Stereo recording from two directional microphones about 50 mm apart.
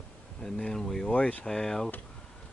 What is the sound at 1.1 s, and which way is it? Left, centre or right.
Speech, left.